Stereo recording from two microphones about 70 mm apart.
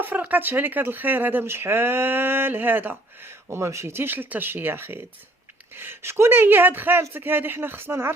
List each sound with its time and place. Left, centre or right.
0.0 s speech: right
3.2 s speech: right